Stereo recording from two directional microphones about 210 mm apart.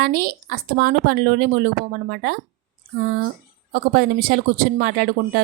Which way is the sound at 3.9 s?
45° right (ahead or behind).